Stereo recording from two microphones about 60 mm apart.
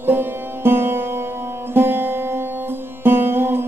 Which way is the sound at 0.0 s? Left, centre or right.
Right.